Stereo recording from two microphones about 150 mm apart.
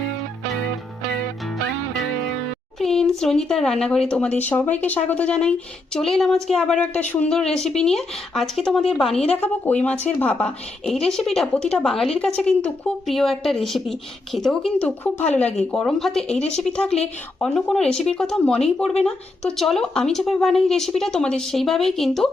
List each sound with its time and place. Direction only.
2.7 s speech: centre (ahead or behind)
16.4 s speech: 45° left (ahead or behind)
16.6 s speech: 5° left (ahead or behind)